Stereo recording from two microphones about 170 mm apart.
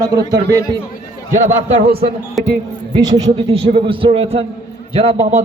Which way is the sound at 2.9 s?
30° right (ahead or behind).